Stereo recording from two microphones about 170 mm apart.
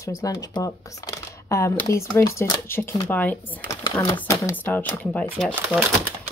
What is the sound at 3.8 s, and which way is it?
Speech, 25° left (ahead or behind).